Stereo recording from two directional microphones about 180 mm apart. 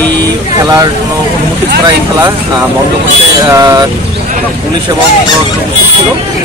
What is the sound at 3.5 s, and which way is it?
Speech, 20° right (ahead or behind).